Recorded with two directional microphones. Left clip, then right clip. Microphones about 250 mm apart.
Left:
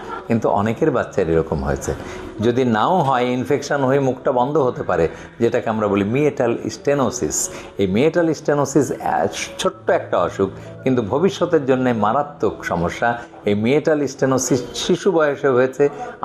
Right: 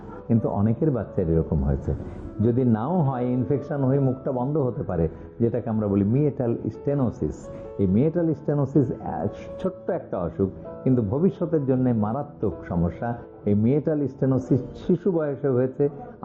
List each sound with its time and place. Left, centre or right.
0.1 s a sound: centre
0.6 s a man's voice: centre
4.4 s speech: left
4.8 s a man's voice: centre
12.6 s a man's voice: centre